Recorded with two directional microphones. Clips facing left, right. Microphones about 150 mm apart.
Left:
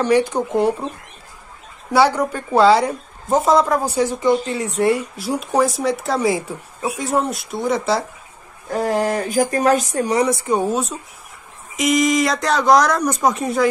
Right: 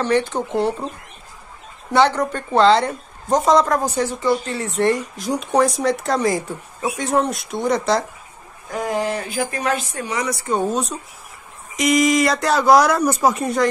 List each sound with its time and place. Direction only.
0.0 s speech: 10° left (ahead or behind)
1.9 s a woman's voice: 10° left (ahead or behind)
8.7 s speech: 40° left (ahead or behind)
10.3 s a woman's voice: 15° left (ahead or behind)